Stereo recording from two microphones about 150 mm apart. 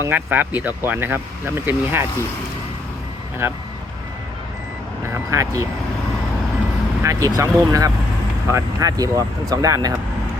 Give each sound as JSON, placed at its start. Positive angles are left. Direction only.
{"t": 0.0, "sound": "speech", "side_deg": -10}
{"t": 3.4, "sound": "speech", "side_deg": -15}
{"t": 5.1, "sound": "speech", "side_deg": -20}
{"t": 7.0, "sound": "speech", "side_deg": -20}